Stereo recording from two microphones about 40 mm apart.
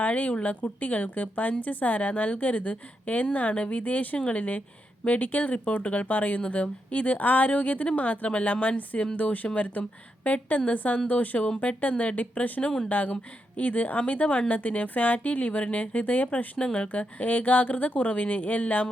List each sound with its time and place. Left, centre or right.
0.0 s a woman's voice: left